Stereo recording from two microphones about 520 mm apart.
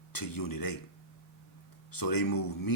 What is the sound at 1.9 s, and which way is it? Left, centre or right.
Speech, left.